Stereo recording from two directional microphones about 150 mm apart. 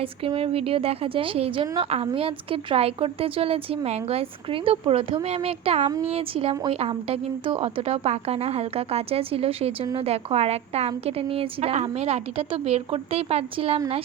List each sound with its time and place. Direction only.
0.0 s a woman's voice: 40° right (ahead or behind)